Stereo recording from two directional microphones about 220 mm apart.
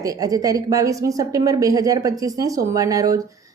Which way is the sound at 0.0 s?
15° right (ahead or behind).